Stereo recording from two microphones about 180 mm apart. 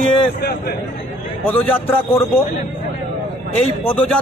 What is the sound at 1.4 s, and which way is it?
Speech, 10° left (ahead or behind).